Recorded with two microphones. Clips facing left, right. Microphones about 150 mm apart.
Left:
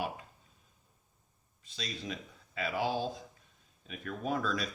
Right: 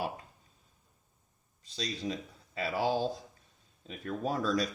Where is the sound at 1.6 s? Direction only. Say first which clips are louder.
Right 5 dB; 35° right (ahead or behind).